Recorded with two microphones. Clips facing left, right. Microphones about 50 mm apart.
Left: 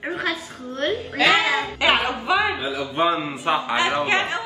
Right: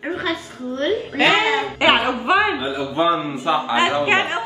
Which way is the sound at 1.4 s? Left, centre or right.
Right.